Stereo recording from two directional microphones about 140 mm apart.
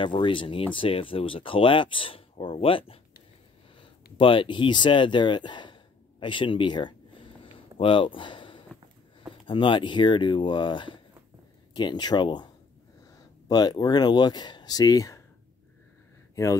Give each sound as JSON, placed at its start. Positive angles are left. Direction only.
{"t": 0.0, "sound": "speech", "side_deg": 35}
{"t": 13.5, "sound": "speech", "side_deg": 30}